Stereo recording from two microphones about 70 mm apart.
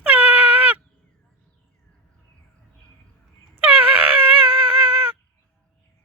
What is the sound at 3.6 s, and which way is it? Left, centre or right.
Dog, right.